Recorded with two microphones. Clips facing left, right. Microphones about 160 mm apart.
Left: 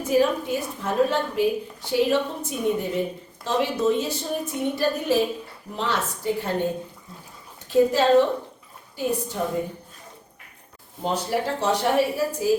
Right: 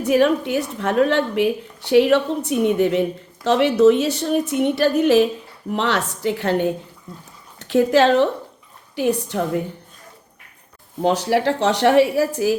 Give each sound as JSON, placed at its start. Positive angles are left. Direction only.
{"t": 0.0, "sound": "speech", "side_deg": -75}
{"t": 11.0, "sound": "speech", "side_deg": -90}